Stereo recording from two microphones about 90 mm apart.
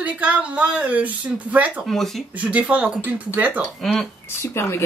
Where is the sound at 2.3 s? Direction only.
15° right (ahead or behind).